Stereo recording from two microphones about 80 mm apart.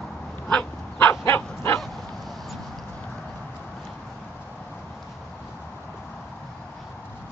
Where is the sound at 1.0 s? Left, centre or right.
Left.